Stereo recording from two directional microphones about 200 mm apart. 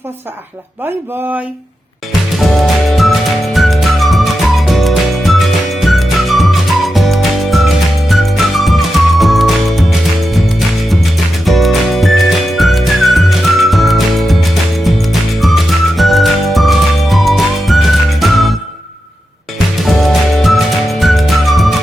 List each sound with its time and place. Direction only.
2.6 s music: centre (ahead or behind)
11.4 s music: centre (ahead or behind)
19.8 s music: centre (ahead or behind)